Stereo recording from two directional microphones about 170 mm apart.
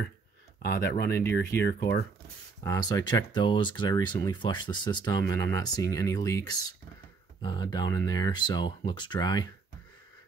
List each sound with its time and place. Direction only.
0.6 s speech: 70° left (ahead or behind)
2.6 s speech: 20° left (ahead or behind)